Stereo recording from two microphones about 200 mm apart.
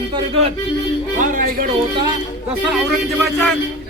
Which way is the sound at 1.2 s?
40° right (ahead or behind).